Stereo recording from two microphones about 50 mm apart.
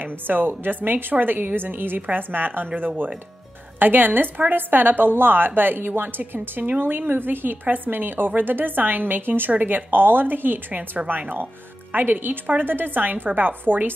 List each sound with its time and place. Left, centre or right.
0.0 s a woman's voice: right
9.5 s a woman's voice: right